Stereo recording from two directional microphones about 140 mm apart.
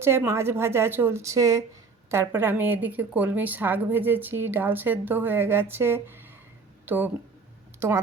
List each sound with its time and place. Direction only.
0.0 s a woman's voice: 15° right (ahead or behind)